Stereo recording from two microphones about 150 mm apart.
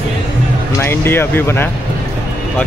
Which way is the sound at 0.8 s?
15° left (ahead or behind).